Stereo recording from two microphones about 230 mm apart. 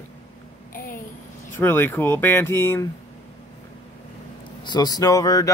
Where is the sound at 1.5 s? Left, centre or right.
Centre.